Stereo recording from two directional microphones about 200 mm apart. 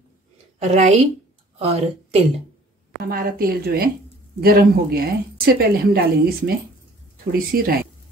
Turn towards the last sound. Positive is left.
turn(degrees=-50)  # may be behind; listen again after turning